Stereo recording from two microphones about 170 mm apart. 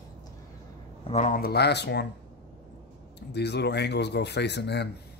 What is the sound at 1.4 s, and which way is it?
Speech, 70° left (ahead or behind).